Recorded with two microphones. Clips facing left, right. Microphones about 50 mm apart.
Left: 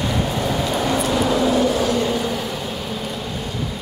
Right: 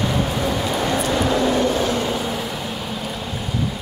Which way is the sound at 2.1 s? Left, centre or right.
Centre.